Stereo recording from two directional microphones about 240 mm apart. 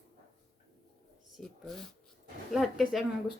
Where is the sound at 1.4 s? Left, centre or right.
Centre.